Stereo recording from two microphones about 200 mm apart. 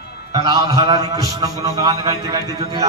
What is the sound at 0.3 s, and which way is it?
A man's voice, 15° right (ahead or behind).